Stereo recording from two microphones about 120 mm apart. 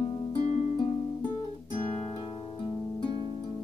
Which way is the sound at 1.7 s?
45° left (ahead or behind).